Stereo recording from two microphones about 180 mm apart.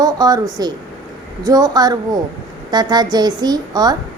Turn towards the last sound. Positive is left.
turn(degrees=-20)  # may be behind; listen again after turning